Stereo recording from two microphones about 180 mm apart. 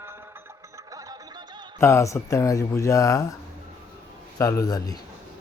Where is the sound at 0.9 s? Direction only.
20° right (ahead or behind).